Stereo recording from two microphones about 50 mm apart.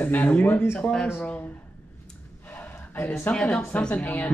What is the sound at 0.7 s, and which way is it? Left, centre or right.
Speech, centre.